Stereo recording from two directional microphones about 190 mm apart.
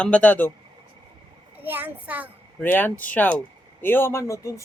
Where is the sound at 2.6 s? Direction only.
10° left (ahead or behind).